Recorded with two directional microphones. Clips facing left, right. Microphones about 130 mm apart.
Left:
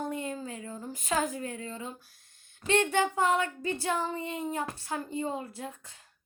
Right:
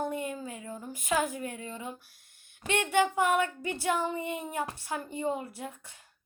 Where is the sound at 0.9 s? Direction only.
15° right (ahead or behind).